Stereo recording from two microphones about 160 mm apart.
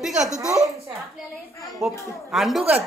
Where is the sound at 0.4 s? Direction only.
5° right (ahead or behind).